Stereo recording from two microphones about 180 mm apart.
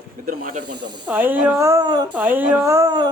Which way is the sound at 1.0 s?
10° right (ahead or behind).